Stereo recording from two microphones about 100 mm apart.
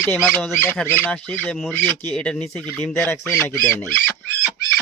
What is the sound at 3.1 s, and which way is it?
Speech, 20° left (ahead or behind).